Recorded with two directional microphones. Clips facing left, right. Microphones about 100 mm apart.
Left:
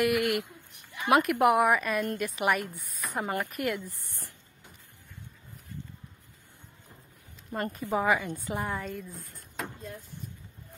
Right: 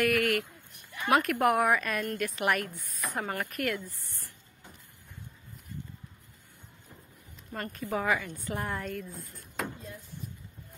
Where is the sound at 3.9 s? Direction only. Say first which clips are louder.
Left 3 dB; 20° left (ahead or behind).